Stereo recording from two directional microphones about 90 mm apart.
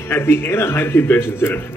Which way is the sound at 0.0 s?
25° left (ahead or behind).